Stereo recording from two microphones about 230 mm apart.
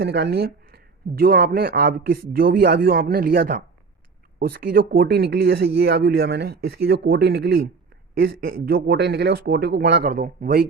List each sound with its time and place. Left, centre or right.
0.0 s speech: right
8.6 s speech: right